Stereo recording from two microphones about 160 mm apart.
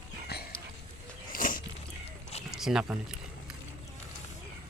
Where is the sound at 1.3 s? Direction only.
55° left (ahead or behind).